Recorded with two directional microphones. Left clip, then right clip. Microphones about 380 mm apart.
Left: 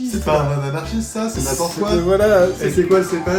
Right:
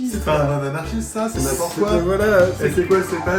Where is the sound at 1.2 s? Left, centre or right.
Centre.